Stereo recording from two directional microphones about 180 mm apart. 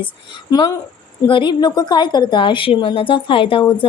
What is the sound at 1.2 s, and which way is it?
A woman's voice, 25° left (ahead or behind).